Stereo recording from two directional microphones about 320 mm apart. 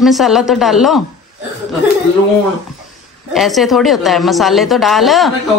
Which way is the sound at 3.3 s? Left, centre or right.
Centre.